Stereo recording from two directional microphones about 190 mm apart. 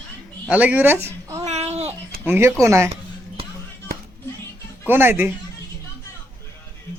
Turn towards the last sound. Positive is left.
turn(degrees=-10)  # may be behind; listen again after turning